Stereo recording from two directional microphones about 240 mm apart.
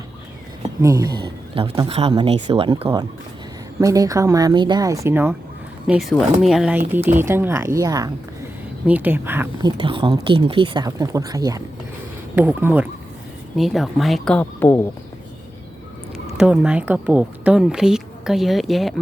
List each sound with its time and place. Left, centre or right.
0.8 s speech: centre
1.6 s speech: right; by 14.8 s centre
16.4 s speech: centre